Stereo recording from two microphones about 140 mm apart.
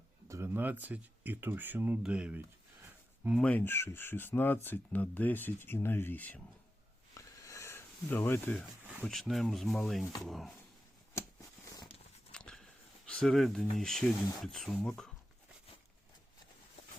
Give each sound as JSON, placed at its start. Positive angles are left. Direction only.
{"t": 0.3, "sound": "speech", "side_deg": -20}
{"t": 3.4, "sound": "speech", "side_deg": 15}
{"t": 7.1, "sound": "a sound", "side_deg": 25}
{"t": 9.0, "sound": "speech", "side_deg": 0}
{"t": 12.3, "sound": "a sound", "side_deg": 5}
{"t": 13.1, "sound": "speech", "side_deg": 5}